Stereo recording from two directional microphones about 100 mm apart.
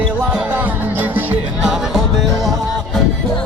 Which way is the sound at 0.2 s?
10° right (ahead or behind).